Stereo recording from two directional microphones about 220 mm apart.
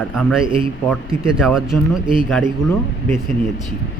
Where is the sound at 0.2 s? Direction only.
Centre (ahead or behind).